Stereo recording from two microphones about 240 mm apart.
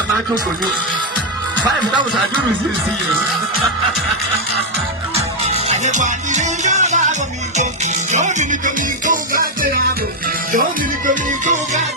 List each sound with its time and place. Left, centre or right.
5.1 s music: right
11.0 s music: right